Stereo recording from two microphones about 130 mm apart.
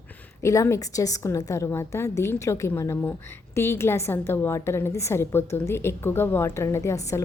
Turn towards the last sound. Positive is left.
turn(degrees=25)  # may be behind; listen again after turning